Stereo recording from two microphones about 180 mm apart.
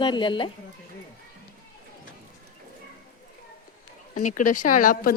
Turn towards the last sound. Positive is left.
turn(degrees=50)  # may be behind; listen again after turning